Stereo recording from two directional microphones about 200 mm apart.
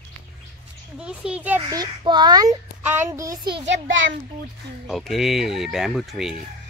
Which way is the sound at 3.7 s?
70° right (ahead or behind).